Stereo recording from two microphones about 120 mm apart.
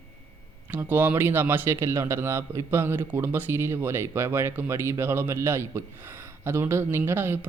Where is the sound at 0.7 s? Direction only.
15° right (ahead or behind).